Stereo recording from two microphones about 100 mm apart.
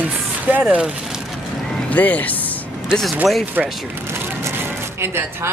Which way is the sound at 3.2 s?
Centre (ahead or behind).